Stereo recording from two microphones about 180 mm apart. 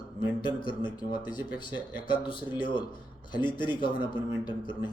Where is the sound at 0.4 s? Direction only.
25° left (ahead or behind).